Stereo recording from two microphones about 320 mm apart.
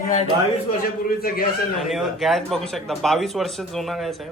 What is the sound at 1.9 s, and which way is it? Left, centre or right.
Speech, centre.